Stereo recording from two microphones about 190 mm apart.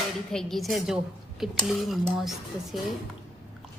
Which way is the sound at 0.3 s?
Centre (ahead or behind).